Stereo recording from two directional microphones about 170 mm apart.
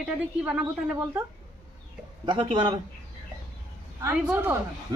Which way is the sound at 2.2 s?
30° right (ahead or behind).